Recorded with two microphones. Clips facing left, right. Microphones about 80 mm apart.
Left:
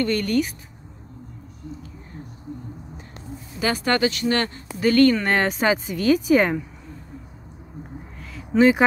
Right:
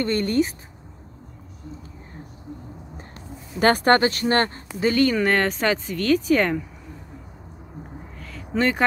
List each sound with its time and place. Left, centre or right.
0.0 s speech: right
3.5 s speech: right
4.7 s speech: centre
5.2 s speech: centre
8.2 s a sound: centre